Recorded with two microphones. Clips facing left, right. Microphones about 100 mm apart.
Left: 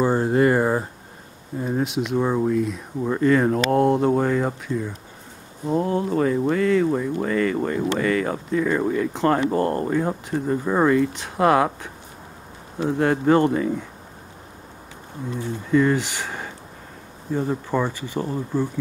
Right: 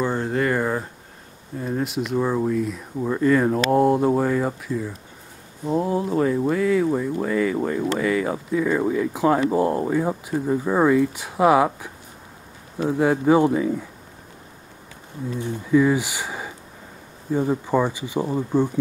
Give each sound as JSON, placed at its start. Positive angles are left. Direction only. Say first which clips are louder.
{"t": 0.2, "sound": "speech", "louder": "left 4 dB", "side_deg": 20}
{"t": 1.8, "sound": "speech", "louder": "left 1 dB", "side_deg": 0}
{"t": 15.7, "sound": "speech", "louder": "right 1 dB", "side_deg": -5}